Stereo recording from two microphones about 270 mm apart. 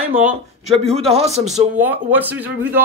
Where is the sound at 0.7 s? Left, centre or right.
Right.